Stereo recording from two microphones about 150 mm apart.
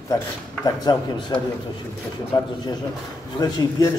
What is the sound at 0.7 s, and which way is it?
A man's voice, 25° left (ahead or behind).